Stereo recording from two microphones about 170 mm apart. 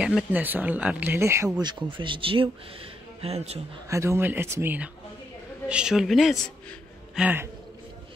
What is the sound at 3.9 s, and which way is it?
A man's voice, 15° right (ahead or behind).